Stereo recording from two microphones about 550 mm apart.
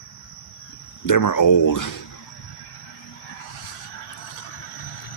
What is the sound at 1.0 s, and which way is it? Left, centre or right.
Speech, left.